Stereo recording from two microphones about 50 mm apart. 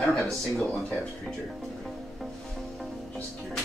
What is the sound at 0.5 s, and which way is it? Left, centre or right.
Speech, centre.